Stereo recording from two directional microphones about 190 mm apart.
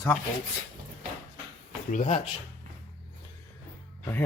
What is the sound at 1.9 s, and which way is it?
Speech, 40° left (ahead or behind).